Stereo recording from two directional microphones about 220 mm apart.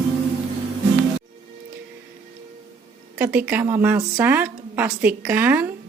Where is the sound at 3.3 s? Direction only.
10° right (ahead or behind).